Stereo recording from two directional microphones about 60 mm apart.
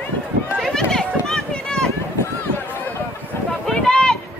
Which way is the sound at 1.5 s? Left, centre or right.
Centre.